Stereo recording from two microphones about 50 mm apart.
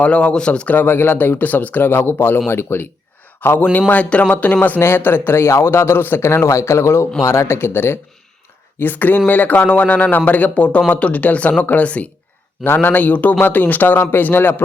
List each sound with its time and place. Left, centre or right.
0.0 s speech: left
0.7 s a man's voice: left
4.8 s a man's voice: left
6.2 s a man's voice: left
8.8 s speech: left
12.6 s a man's voice: left